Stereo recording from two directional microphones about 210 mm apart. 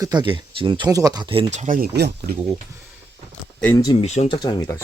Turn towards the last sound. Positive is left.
turn(degrees=20)  # may be behind; listen again after turning